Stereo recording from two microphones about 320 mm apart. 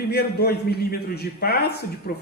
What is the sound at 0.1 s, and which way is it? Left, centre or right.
A man's voice, left.